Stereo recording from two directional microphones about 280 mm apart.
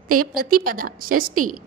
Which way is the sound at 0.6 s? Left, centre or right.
Right.